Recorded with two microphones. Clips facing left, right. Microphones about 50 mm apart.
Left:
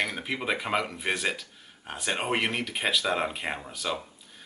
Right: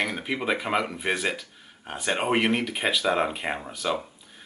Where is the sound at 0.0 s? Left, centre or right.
Centre.